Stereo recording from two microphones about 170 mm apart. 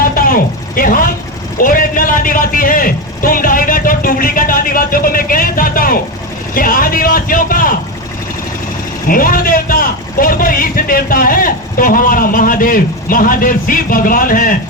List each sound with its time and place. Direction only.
0.0 s a sound: 55° left (ahead or behind)
1.5 s a man's voice: 55° left (ahead or behind)
9.0 s a man's voice: 55° left (ahead or behind)